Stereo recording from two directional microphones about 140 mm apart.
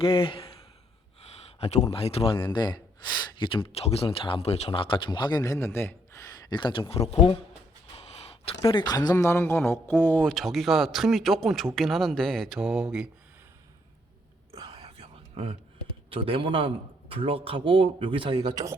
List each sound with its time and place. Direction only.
0.0 s speech: 40° left (ahead or behind)
1.6 s speech: 50° left (ahead or behind)
7.9 s a sound: 45° left (ahead or behind)
8.9 s speech: 30° left (ahead or behind)
9.1 s a man's voice: 15° left (ahead or behind); by 13.1 s 5° right (ahead or behind)
14.7 s whispering: 45° right (ahead or behind)
16.0 s a man's voice: 40° right (ahead or behind)